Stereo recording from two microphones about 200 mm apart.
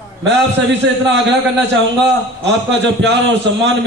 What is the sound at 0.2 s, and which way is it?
A man's voice, 65° right (ahead or behind).